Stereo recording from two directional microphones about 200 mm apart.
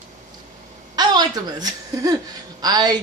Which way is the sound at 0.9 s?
20° right (ahead or behind).